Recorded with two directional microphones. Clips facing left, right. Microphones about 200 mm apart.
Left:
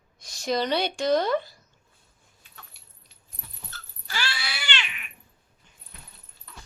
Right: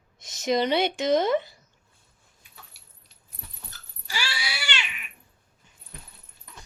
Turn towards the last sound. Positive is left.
turn(degrees=-15)  # may be behind; listen again after turning